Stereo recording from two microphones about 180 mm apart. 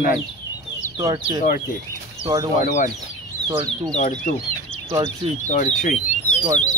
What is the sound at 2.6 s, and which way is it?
Speech, 45° left (ahead or behind).